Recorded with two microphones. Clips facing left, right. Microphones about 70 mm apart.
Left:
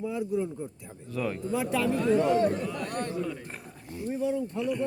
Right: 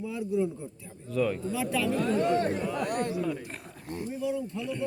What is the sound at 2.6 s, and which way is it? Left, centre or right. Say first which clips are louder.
Speech: right 3 dB; centre.